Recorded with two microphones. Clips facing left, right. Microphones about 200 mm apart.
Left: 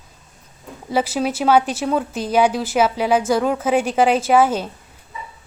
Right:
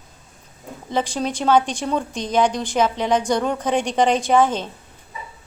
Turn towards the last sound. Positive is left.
turn(degrees=10)  # may be behind; listen again after turning